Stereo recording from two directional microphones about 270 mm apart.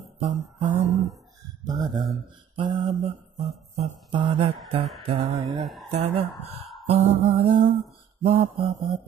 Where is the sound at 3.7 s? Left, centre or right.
Right.